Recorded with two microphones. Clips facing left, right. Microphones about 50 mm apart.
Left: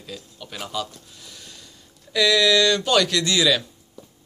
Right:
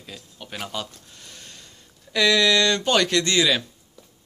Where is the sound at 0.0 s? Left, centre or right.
Right.